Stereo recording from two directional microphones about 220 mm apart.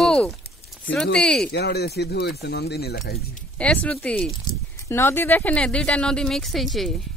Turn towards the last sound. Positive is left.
turn(degrees=0)  # may be behind; listen again after turning